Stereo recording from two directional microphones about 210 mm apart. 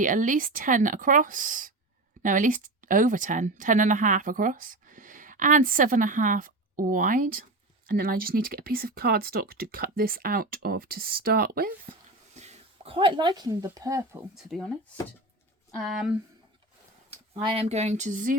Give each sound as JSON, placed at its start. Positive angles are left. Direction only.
{"t": 0.0, "sound": "speech", "side_deg": -40}
{"t": 12.3, "sound": "speech", "side_deg": -30}
{"t": 14.3, "sound": "speech", "side_deg": 0}
{"t": 15.7, "sound": "speech", "side_deg": 0}
{"t": 17.3, "sound": "speech", "side_deg": -25}